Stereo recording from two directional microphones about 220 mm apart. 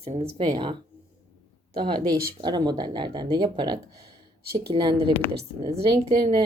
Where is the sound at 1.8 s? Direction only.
20° right (ahead or behind).